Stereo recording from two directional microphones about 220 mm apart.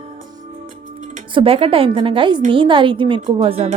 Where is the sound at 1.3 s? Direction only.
25° right (ahead or behind).